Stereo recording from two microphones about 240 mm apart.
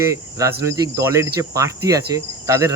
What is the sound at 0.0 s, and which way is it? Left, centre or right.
Cricket, centre.